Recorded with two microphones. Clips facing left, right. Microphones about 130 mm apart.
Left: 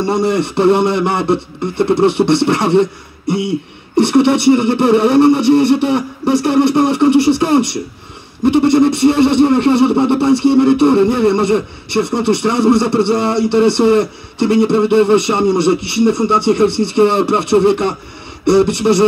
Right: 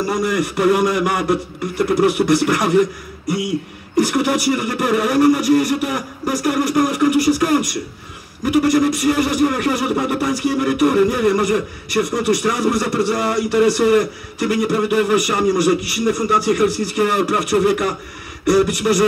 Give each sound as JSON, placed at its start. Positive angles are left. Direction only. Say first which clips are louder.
{"t": 0.0, "sound": "speech", "louder": "left 4 dB", "side_deg": 30}